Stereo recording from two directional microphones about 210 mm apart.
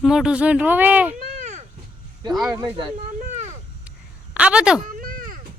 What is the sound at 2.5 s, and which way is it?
Speech, 20° right (ahead or behind).